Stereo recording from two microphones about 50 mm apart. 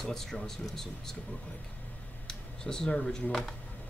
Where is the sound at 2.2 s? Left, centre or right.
Centre.